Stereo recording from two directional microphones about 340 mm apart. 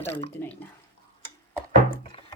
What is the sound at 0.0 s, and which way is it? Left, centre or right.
Speech, centre.